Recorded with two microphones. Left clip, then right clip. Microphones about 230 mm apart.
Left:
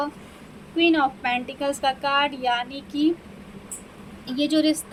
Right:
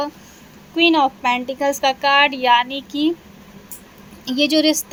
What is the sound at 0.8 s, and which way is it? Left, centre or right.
A woman's voice, right.